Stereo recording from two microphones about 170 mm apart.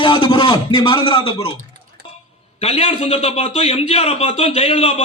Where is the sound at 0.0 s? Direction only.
30° left (ahead or behind).